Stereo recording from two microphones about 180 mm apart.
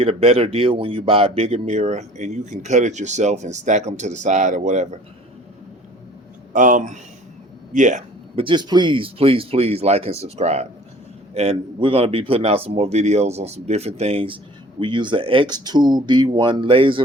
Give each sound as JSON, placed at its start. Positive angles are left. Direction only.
{"t": 0.0, "sound": "speech", "side_deg": -35}
{"t": 6.5, "sound": "speech", "side_deg": -45}
{"t": 8.4, "sound": "speech", "side_deg": -25}